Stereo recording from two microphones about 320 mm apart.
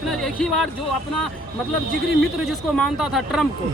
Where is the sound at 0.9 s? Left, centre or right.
Left.